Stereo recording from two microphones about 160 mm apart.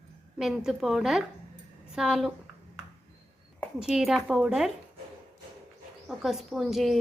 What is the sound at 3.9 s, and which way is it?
Speech, 5° right (ahead or behind).